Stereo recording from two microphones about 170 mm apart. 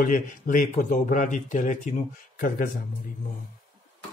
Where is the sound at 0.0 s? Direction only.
50° left (ahead or behind).